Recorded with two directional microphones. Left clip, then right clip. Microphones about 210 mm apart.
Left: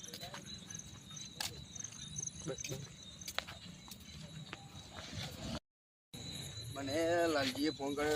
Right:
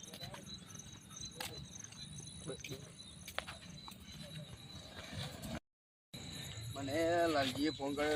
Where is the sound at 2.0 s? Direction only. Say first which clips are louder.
Left 9 dB; 40° right (ahead or behind).